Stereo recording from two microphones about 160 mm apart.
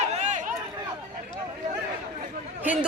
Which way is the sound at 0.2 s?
50° right (ahead or behind).